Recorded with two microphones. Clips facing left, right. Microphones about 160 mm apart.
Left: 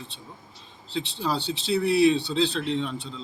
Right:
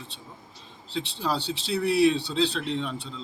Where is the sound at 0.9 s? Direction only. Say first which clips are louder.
Left 1 dB; centre (ahead or behind).